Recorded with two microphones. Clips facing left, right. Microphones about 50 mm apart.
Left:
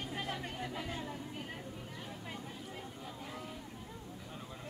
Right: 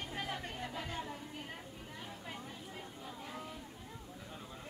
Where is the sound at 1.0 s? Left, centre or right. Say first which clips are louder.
Left 2 dB; centre.